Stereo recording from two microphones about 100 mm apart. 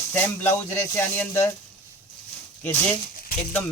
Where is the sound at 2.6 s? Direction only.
25° left (ahead or behind).